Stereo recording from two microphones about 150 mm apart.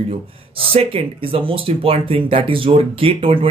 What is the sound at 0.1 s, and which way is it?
Speech, 40° right (ahead or behind).